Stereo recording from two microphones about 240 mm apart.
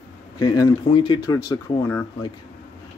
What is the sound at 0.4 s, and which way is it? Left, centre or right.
Speech, centre.